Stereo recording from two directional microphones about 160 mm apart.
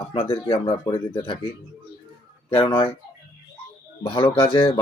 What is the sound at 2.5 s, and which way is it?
Speech, 35° left (ahead or behind).